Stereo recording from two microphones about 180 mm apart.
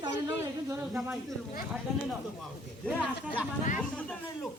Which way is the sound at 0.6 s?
10° right (ahead or behind).